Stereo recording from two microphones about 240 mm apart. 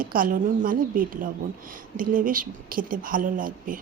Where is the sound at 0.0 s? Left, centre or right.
Right.